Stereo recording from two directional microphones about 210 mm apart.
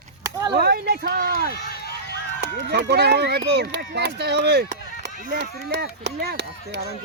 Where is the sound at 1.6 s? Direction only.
50° left (ahead or behind).